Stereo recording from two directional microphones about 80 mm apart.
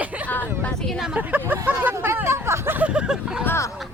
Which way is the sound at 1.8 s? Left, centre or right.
Right.